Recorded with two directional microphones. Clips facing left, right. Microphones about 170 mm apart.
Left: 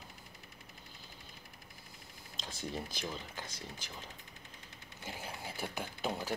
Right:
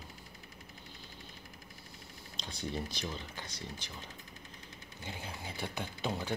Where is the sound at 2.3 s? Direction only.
5° left (ahead or behind).